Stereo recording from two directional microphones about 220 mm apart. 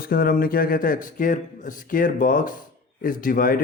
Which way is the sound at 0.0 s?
45° left (ahead or behind).